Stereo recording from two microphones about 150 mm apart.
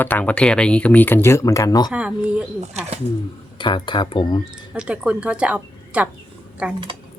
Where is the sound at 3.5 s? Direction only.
30° left (ahead or behind).